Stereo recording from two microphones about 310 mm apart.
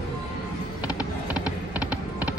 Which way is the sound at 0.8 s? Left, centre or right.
Centre.